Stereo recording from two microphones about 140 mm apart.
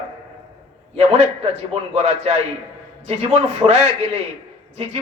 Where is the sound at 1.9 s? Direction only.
50° right (ahead or behind).